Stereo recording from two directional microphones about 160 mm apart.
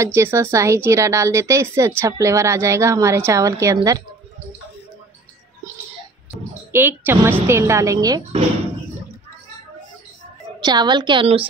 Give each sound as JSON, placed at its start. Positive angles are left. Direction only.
{"t": 0.0, "sound": "a woman's voice", "side_deg": -15}
{"t": 6.3, "sound": "a sound", "side_deg": 0}
{"t": 6.7, "sound": "a woman's voice", "side_deg": -10}
{"t": 10.6, "sound": "a woman's voice", "side_deg": -25}